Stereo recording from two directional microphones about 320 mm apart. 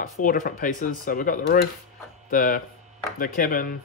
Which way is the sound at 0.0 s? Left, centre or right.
Left.